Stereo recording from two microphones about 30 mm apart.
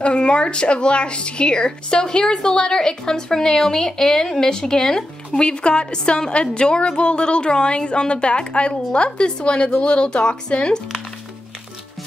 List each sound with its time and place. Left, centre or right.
0.0 s a woman's voice: left
5.4 s a woman's voice: left